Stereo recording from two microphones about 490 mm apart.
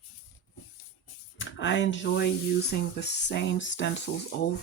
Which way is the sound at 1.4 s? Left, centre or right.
Left.